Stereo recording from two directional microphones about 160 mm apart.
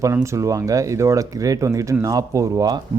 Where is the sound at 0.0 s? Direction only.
20° right (ahead or behind).